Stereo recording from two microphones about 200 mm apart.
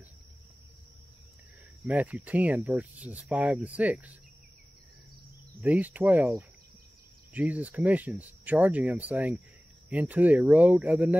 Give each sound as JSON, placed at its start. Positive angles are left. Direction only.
{"t": 1.9, "sound": "speech", "side_deg": -5}
{"t": 5.6, "sound": "speech", "side_deg": -10}